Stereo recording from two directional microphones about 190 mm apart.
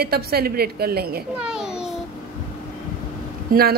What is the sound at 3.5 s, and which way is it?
Speech, 50° right (ahead or behind).